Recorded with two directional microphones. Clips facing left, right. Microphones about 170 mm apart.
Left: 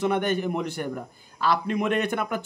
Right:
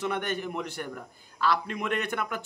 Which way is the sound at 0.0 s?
15° left (ahead or behind).